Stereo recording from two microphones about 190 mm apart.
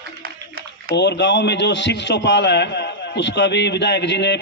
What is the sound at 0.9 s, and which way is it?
A man's voice, 65° left (ahead or behind).